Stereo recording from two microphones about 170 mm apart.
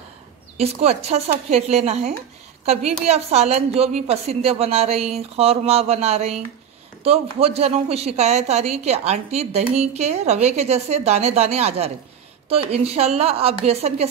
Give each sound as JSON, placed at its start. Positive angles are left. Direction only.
{"t": 0.6, "sound": "a woman's voice", "side_deg": -40}